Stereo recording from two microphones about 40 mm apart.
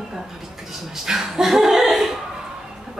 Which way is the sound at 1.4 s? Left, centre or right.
Centre.